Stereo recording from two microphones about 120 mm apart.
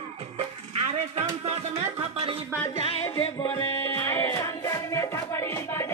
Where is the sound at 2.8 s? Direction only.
55° left (ahead or behind).